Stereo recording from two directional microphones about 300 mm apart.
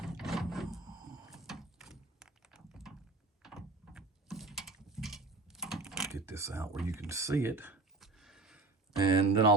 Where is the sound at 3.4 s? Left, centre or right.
Centre.